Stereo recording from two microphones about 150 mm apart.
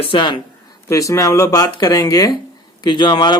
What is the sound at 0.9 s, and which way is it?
Speech, 20° left (ahead or behind).